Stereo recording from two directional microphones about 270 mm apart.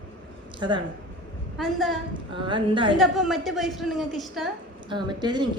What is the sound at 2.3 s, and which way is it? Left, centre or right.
Speech, centre.